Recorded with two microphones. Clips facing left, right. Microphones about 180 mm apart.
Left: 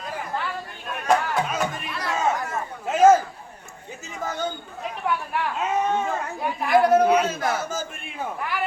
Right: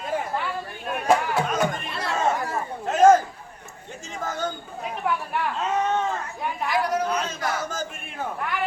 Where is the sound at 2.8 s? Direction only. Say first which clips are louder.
Even; 5° left (ahead or behind).